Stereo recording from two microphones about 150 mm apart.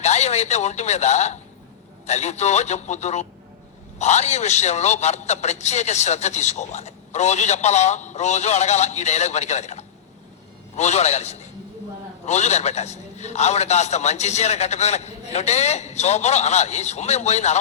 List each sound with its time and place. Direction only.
0.0 s a man's voice: 50° left (ahead or behind)